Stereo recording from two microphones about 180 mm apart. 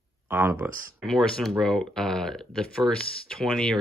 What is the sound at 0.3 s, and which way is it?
Speech, 10° right (ahead or behind).